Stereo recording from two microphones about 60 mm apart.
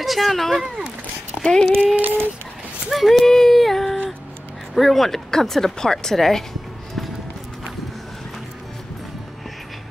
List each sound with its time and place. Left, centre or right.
0.0 s speech: centre
2.0 s speech: right
2.9 s a sound: centre
4.7 s speech: centre